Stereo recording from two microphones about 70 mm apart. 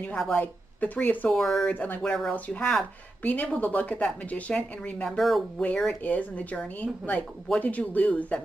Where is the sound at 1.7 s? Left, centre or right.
Left.